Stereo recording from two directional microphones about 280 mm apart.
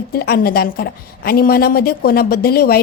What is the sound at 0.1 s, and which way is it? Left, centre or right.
A woman's voice, left.